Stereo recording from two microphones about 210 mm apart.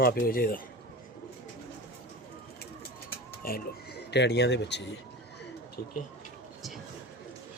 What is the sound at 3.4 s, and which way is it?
Speech, 45° left (ahead or behind).